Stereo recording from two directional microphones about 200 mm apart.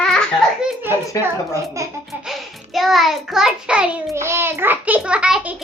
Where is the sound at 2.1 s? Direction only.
Centre (ahead or behind).